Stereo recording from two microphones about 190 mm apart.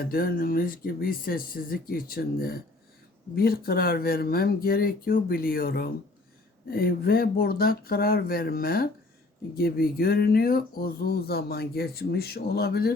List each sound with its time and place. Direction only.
0.0 s speech: 50° left (ahead or behind)